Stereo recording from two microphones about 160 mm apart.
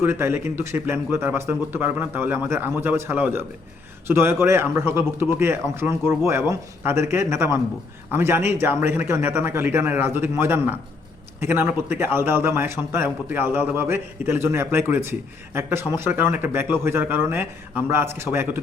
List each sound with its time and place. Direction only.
0.0 s a man's voice: 15° right (ahead or behind)